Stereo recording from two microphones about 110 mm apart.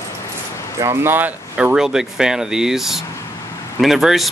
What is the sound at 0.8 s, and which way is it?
Speech, 25° right (ahead or behind).